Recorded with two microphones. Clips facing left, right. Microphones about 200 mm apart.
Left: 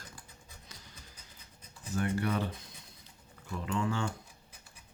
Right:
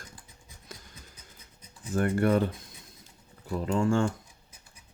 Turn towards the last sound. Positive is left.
turn(degrees=-45)  # may be behind; listen again after turning